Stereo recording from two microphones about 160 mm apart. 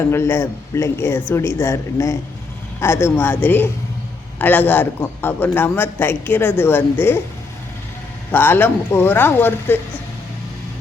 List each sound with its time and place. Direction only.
0.1 s a man's voice: 15° left (ahead or behind)
8.3 s a man's voice: 10° left (ahead or behind)